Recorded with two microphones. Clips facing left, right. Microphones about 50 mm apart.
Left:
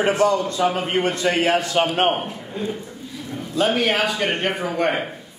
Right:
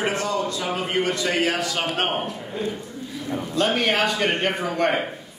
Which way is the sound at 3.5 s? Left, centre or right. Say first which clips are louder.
Left 2 dB; centre.